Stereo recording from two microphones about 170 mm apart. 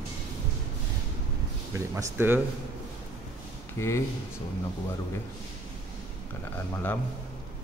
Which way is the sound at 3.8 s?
15° left (ahead or behind).